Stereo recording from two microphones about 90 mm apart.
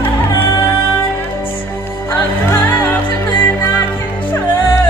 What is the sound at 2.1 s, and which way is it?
Music, 25° left (ahead or behind).